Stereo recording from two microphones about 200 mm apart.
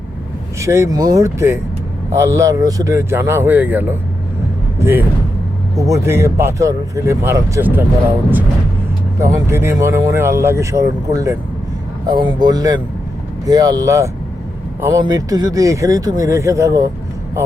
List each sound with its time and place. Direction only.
0.6 s speech: 15° right (ahead or behind)
9.2 s speech: 15° right (ahead or behind)